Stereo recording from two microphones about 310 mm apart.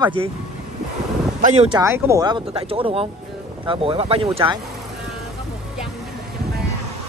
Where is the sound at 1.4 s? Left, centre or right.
Centre.